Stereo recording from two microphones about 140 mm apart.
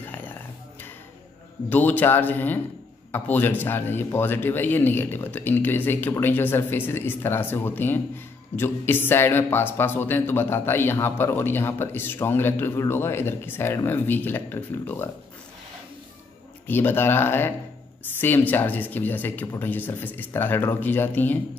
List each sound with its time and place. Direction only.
0.0 s music: 15° left (ahead or behind)
1.7 s a man's voice: 10° left (ahead or behind)
16.6 s a man's voice: 15° left (ahead or behind)